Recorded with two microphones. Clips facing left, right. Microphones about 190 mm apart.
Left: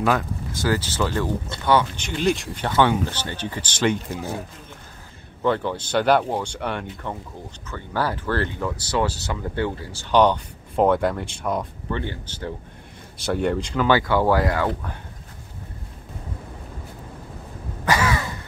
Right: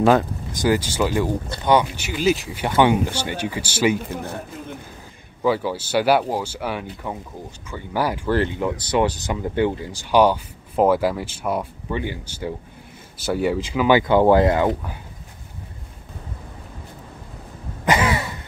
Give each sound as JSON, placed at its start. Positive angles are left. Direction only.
{"t": 0.5, "sound": "speech", "side_deg": -15}
{"t": 5.4, "sound": "speech", "side_deg": -5}
{"t": 13.8, "sound": "speech", "side_deg": -20}
{"t": 17.8, "sound": "throat clearing", "side_deg": -20}